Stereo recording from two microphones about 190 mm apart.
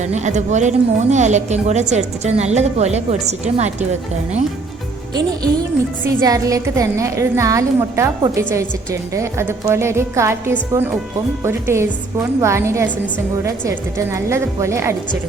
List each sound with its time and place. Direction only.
0.0 s a woman's voice: 40° right (ahead or behind)
6.1 s a woman's voice: 20° right (ahead or behind)